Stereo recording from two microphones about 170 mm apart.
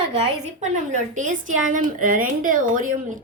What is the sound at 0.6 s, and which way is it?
A woman's voice, 45° right (ahead or behind).